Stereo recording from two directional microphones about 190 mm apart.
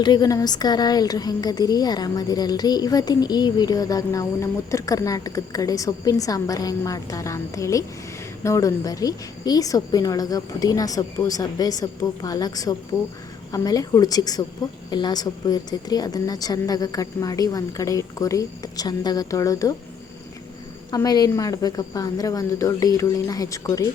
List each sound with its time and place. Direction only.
0.0 s a woman's voice: 20° left (ahead or behind)
20.9 s a woman's voice: 20° left (ahead or behind)